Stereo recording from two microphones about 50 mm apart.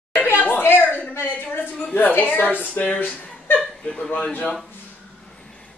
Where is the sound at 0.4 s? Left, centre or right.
Left.